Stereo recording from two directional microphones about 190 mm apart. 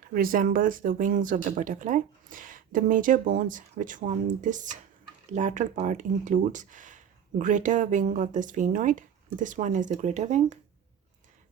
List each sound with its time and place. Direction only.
0.1 s speech: 50° right (ahead or behind)